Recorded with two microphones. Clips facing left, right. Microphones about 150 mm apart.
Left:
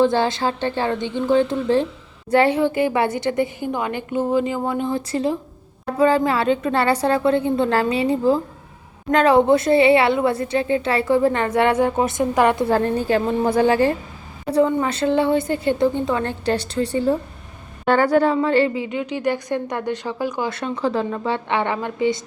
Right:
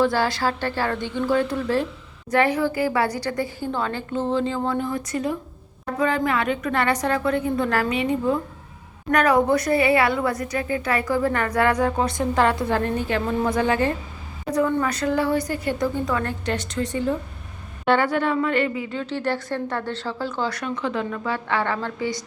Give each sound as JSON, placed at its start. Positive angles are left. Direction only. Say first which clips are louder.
{"t": 0.0, "sound": "a woman's voice", "louder": "left 3 dB", "side_deg": 20}
{"t": 12.7, "sound": "a woman's voice", "louder": "left 4 dB", "side_deg": 35}
{"t": 18.9, "sound": "speech", "louder": "left 2 dB", "side_deg": 15}
{"t": 20.6, "sound": "a woman's voice", "louder": "left 4 dB", "side_deg": 30}